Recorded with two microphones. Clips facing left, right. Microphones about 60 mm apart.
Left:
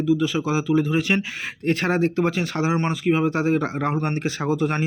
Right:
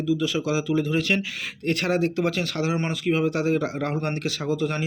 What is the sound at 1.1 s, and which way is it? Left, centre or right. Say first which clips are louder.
Speech: left 2 dB; left.